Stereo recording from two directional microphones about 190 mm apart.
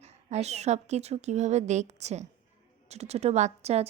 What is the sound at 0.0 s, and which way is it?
A woman's voice, 35° right (ahead or behind).